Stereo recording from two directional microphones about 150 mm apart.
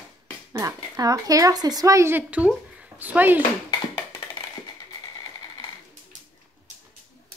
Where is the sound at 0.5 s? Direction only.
20° right (ahead or behind).